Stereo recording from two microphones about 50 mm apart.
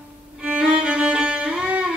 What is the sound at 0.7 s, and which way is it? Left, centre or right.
Music, centre.